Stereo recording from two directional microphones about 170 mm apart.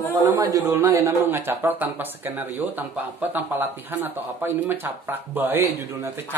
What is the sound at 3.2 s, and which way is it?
Speech, 10° right (ahead or behind).